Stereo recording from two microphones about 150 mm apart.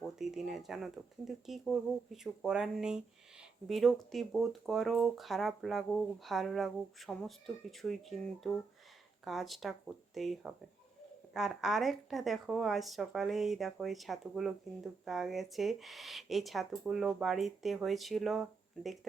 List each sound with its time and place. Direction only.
0.0 s speech: centre (ahead or behind)